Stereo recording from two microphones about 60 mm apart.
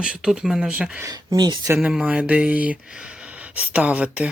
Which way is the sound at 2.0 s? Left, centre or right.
Right.